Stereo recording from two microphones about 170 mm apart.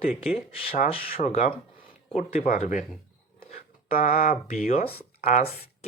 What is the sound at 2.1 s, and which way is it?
Speech, 45° left (ahead or behind).